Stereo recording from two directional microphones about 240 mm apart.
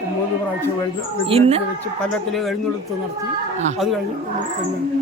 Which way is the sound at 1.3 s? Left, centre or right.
Right.